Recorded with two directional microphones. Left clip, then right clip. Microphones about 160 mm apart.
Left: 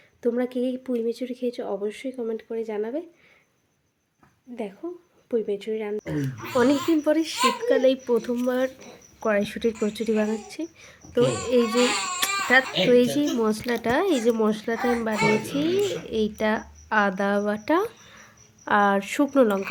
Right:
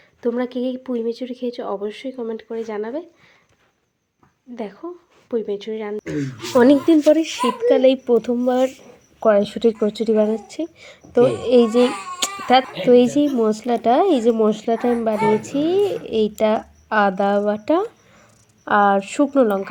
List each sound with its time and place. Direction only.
0.2 s speech: centre (ahead or behind)
4.5 s speech: 5° right (ahead or behind)
6.1 s speech: 25° right (ahead or behind)
7.0 s speech: 5° right (ahead or behind)
12.2 s a sound: 10° right (ahead or behind)
12.9 s speech: 10° right (ahead or behind); by 19.5 s 5° left (ahead or behind)